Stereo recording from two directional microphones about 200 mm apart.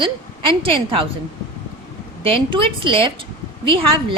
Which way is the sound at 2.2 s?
25° right (ahead or behind).